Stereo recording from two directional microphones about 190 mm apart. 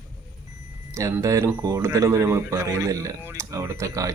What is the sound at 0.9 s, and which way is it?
Speech, 15° right (ahead or behind).